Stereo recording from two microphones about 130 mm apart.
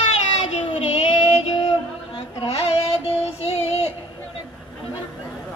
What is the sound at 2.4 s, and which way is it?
Child singing, 50° left (ahead or behind).